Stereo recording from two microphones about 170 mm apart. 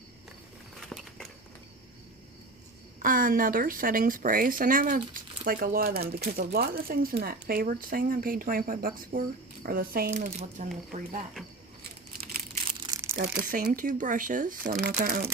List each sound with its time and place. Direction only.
0.8 s a sound: centre (ahead or behind)
3.0 s speech: 55° right (ahead or behind)
10.2 s speech: 40° right (ahead or behind)
12.6 s crumpling: 30° right (ahead or behind)
13.4 s speech: 55° right (ahead or behind)